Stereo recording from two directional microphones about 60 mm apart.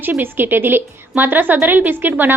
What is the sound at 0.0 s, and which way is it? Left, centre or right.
A woman's voice, right.